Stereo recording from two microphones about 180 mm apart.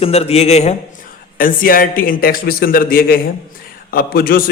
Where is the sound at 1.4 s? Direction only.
50° left (ahead or behind).